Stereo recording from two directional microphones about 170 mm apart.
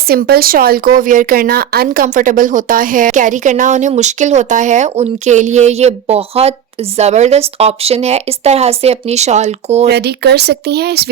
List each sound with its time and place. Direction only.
0.1 s a woman's voice: 65° right (ahead or behind); by 9.8 s 40° right (ahead or behind)
9.8 s speech: 75° right (ahead or behind)